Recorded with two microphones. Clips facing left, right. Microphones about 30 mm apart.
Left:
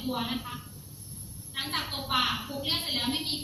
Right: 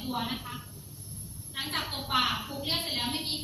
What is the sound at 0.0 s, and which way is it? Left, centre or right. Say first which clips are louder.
Speech: left 1 dB; centre.